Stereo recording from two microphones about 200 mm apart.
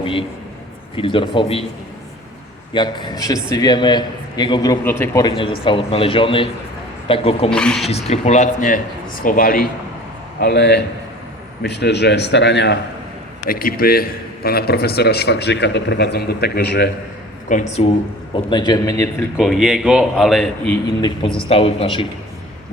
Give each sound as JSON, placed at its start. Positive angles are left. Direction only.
{"t": 0.0, "sound": "a sound", "side_deg": 25}
{"t": 0.9, "sound": "a man's voice", "side_deg": 25}
{"t": 2.7, "sound": "a man's voice", "side_deg": 20}
{"t": 7.5, "sound": "a man's voice", "side_deg": 5}
{"t": 7.9, "sound": "a man's voice", "side_deg": 30}
{"t": 10.4, "sound": "a man's voice", "side_deg": 55}
{"t": 13.5, "sound": "a man's voice", "side_deg": 45}
{"t": 17.5, "sound": "speech", "side_deg": 35}
{"t": 18.5, "sound": "a man's voice", "side_deg": 20}
{"t": 19.4, "sound": "a man's voice", "side_deg": 0}
{"t": 21.0, "sound": "a man's voice", "side_deg": 25}